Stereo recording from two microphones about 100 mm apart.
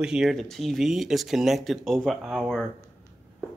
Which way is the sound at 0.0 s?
5° right (ahead or behind).